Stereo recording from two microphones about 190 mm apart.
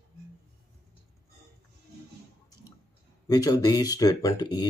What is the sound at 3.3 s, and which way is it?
Speech, 20° left (ahead or behind).